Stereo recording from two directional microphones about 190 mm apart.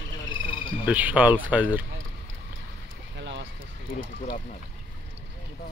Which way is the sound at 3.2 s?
70° right (ahead or behind).